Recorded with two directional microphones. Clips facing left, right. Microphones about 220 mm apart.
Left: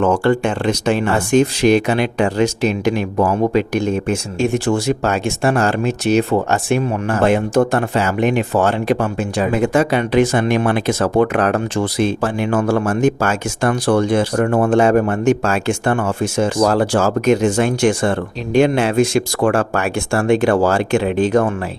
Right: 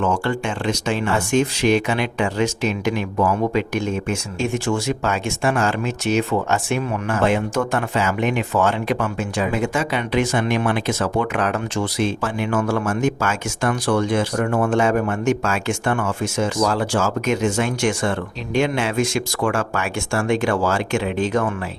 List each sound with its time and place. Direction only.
0.3 s speech: 55° left (ahead or behind)
1.0 s speech: 35° left (ahead or behind)
9.5 s speech: 55° left (ahead or behind)
11.8 s speech: 55° left (ahead or behind)
12.2 s speech: 35° left (ahead or behind)